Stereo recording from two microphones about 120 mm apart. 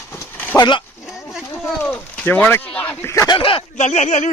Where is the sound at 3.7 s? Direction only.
75° left (ahead or behind).